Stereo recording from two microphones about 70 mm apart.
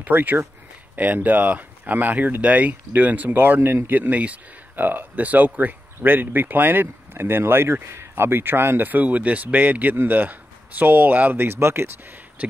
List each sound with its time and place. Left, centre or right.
0.0 s speech: right
4.1 s speech: right
12.4 s speech: right